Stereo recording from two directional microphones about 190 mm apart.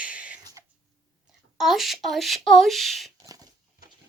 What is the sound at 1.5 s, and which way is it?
Speech, centre (ahead or behind).